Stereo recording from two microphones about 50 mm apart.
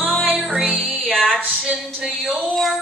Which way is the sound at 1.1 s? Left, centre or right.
Centre.